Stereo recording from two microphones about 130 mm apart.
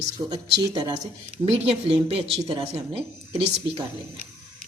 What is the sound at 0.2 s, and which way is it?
Speech, 20° right (ahead or behind).